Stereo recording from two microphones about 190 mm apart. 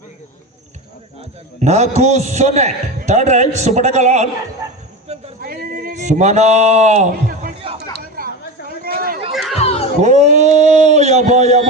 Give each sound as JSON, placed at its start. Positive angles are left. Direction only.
{"t": 1.6, "sound": "a man's voice", "side_deg": -35}
{"t": 5.4, "sound": "a sound", "side_deg": -50}
{"t": 9.3, "sound": "music", "side_deg": 0}
{"t": 9.6, "sound": "music", "side_deg": 30}
{"t": 10.0, "sound": "a man's voice", "side_deg": -40}